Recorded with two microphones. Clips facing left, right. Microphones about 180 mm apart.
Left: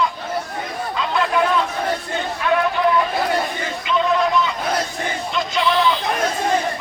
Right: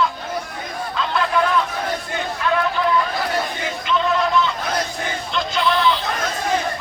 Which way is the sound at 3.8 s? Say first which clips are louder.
Left 1 dB; centre (ahead or behind).